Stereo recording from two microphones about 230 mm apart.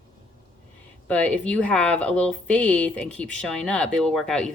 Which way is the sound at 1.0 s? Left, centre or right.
Centre.